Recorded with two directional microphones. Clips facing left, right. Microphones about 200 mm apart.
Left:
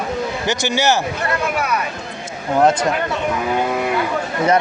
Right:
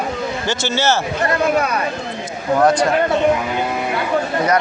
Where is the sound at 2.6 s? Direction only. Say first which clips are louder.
Right 1 dB; 25° left (ahead or behind).